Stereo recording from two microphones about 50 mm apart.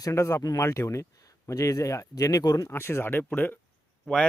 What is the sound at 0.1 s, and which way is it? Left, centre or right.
Speech, left.